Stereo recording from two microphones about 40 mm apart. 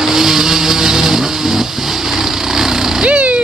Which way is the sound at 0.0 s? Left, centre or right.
Centre.